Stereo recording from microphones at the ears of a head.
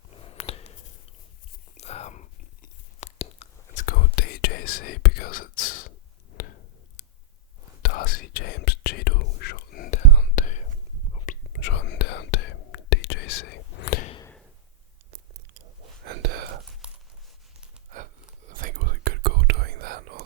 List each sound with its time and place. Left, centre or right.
0.1 s a sound: left
1.7 s whispering: left
15.1 s whispering: right
17.9 s whispering: right